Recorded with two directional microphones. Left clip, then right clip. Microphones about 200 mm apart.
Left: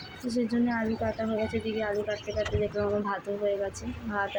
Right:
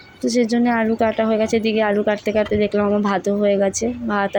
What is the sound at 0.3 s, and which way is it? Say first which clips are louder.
Speech: right 11 dB; 35° right (ahead or behind).